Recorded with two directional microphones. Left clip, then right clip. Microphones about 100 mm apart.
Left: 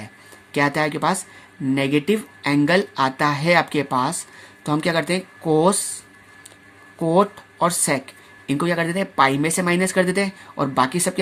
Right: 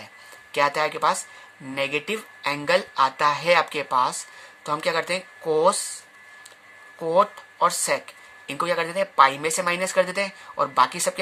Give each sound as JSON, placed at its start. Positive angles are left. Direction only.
{"t": 0.5, "sound": "speech", "side_deg": 20}
{"t": 7.0, "sound": "speech", "side_deg": 30}